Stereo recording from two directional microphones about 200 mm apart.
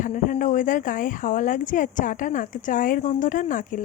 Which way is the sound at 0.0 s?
40° left (ahead or behind).